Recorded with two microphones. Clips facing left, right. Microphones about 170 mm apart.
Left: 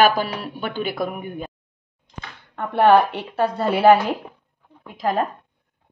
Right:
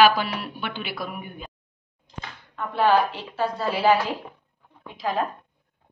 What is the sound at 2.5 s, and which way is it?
A woman's voice, 60° left (ahead or behind).